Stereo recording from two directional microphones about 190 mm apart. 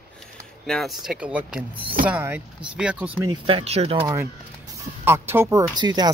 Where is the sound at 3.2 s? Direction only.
30° right (ahead or behind).